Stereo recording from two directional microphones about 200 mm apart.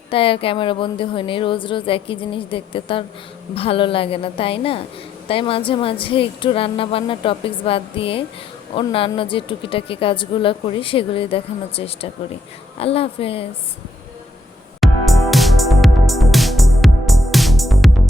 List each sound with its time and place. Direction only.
0.1 s a woman's voice: 25° left (ahead or behind)
14.8 s music: centre (ahead or behind)